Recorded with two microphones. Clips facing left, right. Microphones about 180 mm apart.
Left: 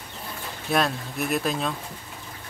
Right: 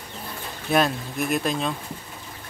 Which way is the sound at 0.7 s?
Centre (ahead or behind).